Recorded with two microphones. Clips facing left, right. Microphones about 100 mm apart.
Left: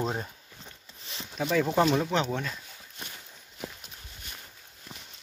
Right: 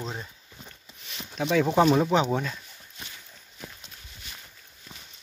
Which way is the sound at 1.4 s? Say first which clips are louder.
Right 3 dB; centre (ahead or behind).